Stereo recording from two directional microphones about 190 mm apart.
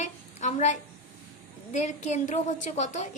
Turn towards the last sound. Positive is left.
turn(degrees=40)  # may be behind; listen again after turning